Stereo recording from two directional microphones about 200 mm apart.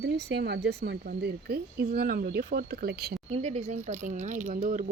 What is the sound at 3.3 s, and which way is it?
Speech, 35° right (ahead or behind).